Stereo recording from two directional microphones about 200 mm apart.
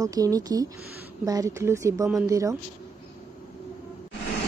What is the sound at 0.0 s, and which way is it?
Speech, 15° right (ahead or behind).